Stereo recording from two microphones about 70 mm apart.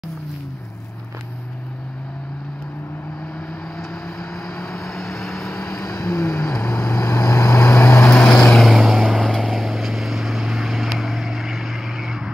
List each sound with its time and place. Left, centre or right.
4.2 s vehicle: centre
5.7 s vehicle: left
8.1 s vehicle: centre
8.6 s vehicle: centre